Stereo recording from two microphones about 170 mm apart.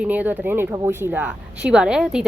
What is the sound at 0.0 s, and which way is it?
A woman's voice, 10° right (ahead or behind).